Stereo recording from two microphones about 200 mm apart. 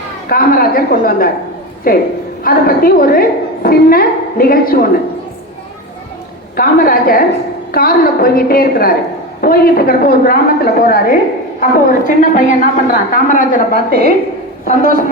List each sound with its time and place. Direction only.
0.3 s a woman's voice: 45° left (ahead or behind)
6.6 s a woman's voice: 45° left (ahead or behind)
13.7 s a woman's voice: 50° right (ahead or behind)